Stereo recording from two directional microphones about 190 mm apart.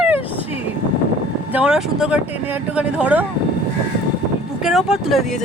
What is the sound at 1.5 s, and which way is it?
Speech, 5° right (ahead or behind).